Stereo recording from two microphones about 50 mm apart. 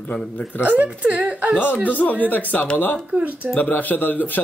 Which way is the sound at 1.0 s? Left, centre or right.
Right.